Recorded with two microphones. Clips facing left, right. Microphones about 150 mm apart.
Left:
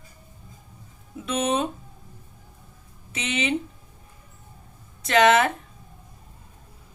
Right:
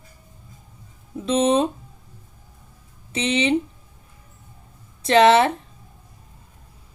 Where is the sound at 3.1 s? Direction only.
30° right (ahead or behind).